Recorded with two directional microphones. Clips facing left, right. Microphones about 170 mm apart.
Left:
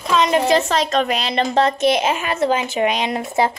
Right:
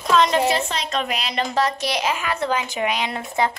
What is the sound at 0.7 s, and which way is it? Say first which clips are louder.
Speech: left 7 dB; 45° left (ahead or behind).